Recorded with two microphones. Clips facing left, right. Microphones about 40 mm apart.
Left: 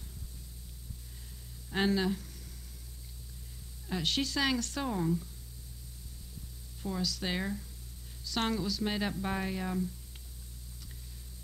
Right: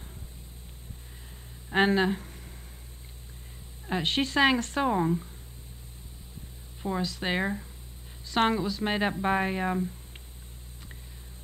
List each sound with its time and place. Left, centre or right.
1.7 s speech: right
3.8 s speech: right
6.8 s speech: right